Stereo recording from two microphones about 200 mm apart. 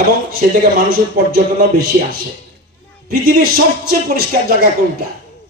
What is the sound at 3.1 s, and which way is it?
Speech, 45° right (ahead or behind).